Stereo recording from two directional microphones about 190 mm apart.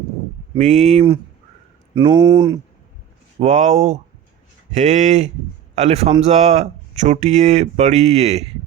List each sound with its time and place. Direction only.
0.6 s speech: 40° right (ahead or behind)
2.0 s speech: 25° right (ahead or behind)
3.4 s speech: 40° right (ahead or behind)